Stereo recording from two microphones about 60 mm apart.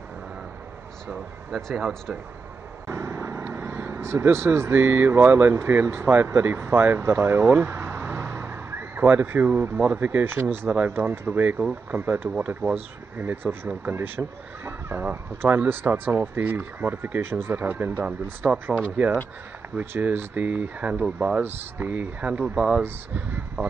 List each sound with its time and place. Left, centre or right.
1.7 s speech: centre
2.9 s vehicle: right
4.0 s speech: right
6.7 s vehicle: right
9.8 s speech: right
10.7 s speech: right
12.3 s speech: right
22.8 s speech: right